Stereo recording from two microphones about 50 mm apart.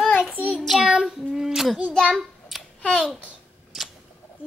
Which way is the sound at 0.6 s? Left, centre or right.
Centre.